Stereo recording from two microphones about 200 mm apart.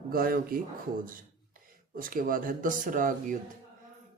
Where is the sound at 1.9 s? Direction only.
45° right (ahead or behind).